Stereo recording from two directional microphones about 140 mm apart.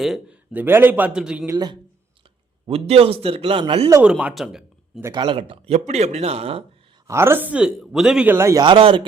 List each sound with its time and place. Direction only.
0.0 s a man's voice: centre (ahead or behind)
0.5 s speech: 15° right (ahead or behind)
1.5 s speech: 30° right (ahead or behind)
2.6 s speech: 45° right (ahead or behind)
4.0 s speech: 5° right (ahead or behind)
5.1 s speech: 35° right (ahead or behind)
7.1 s speech: 15° right (ahead or behind)
8.6 s a man's voice: 40° right (ahead or behind)